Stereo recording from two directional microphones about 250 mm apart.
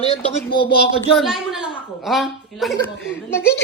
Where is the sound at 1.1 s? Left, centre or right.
Centre.